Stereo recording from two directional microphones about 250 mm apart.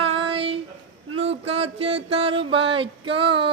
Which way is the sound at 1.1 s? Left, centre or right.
Right.